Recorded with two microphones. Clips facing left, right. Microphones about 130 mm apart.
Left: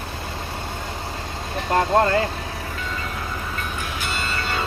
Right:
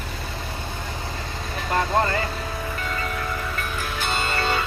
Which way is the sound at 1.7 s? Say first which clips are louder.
Left 4 dB; 45° left (ahead or behind).